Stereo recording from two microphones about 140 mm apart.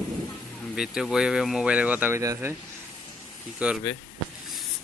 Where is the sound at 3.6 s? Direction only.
10° right (ahead or behind).